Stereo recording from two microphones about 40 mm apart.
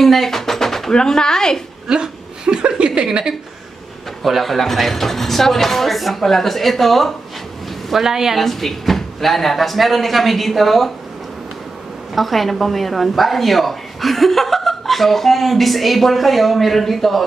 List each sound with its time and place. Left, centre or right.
0.0 s a sound: centre
0.9 s speech: centre
1.9 s a woman's voice: centre
4.2 s a woman's voice: centre
7.9 s a woman's voice: centre
8.4 s a woman's voice: centre
12.2 s a woman's voice: centre